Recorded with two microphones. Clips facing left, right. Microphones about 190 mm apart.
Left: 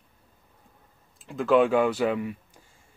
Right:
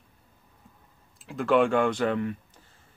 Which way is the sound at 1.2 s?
Centre (ahead or behind).